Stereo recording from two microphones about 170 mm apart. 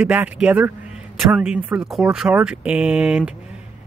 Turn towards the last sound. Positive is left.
turn(degrees=-5)  # may be behind; listen again after turning